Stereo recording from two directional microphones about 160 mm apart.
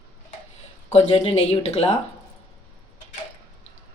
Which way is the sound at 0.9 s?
40° left (ahead or behind).